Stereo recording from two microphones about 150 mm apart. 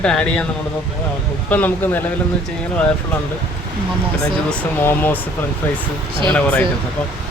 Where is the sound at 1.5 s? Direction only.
10° left (ahead or behind).